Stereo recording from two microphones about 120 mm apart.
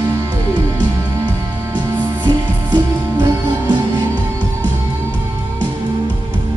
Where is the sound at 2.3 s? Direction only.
35° right (ahead or behind).